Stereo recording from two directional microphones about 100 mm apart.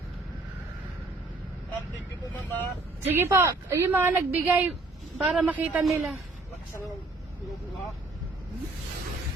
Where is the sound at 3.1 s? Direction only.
25° right (ahead or behind).